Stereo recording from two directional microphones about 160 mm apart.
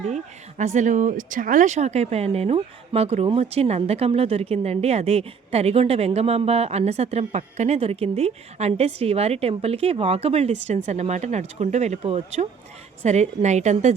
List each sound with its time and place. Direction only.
0.1 s a woman's voice: 50° right (ahead or behind)